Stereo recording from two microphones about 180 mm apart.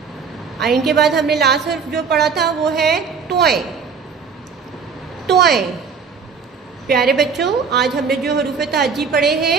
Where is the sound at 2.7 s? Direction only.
Centre (ahead or behind).